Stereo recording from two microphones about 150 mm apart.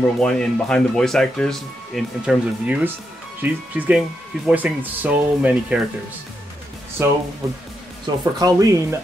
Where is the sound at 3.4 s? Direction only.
10° right (ahead or behind).